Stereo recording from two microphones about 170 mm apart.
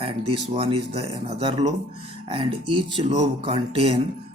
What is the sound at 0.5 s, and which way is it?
Speech, 35° right (ahead or behind).